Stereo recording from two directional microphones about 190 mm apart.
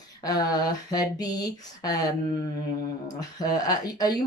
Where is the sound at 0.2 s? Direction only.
20° left (ahead or behind).